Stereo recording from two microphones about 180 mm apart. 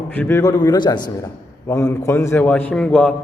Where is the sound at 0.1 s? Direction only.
10° left (ahead or behind).